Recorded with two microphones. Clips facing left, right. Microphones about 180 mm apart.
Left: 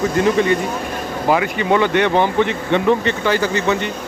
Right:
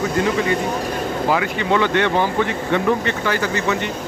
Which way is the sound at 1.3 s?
15° left (ahead or behind).